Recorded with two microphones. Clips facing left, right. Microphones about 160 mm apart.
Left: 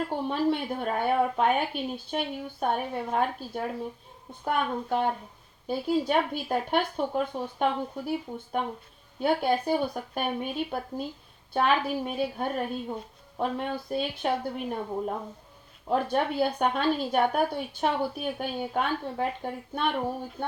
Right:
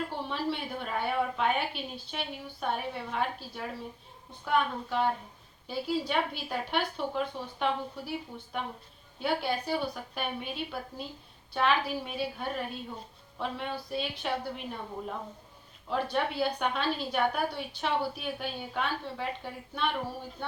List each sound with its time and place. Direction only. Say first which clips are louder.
0.1 s a woman's voice: left 7 dB; 50° left (ahead or behind)
9.2 s a woman's voice: left 6 dB; 50° left (ahead or behind)